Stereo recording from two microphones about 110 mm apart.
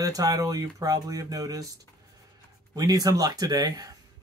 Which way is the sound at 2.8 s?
35° right (ahead or behind).